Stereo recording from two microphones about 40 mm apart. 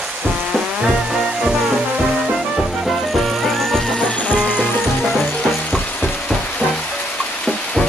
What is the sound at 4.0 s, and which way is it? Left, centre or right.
Music, left.